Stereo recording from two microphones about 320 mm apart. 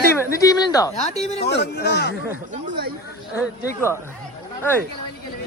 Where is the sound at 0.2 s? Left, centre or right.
Centre.